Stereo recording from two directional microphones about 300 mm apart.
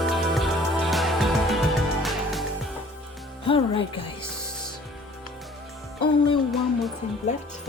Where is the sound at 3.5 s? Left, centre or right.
Centre.